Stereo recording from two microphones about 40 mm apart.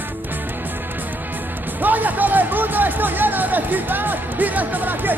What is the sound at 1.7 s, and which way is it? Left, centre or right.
Speech, right.